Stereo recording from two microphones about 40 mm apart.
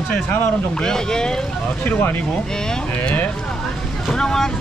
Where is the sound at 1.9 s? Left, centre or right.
Left.